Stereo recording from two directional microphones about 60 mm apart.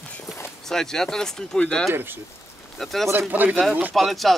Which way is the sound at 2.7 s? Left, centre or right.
Centre.